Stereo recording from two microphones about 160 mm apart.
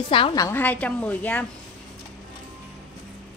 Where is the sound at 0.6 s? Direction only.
10° left (ahead or behind).